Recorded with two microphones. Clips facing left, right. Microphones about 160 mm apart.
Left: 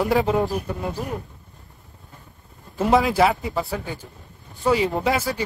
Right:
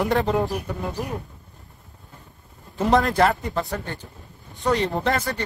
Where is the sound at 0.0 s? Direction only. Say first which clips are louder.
Left 1 dB; 5° left (ahead or behind).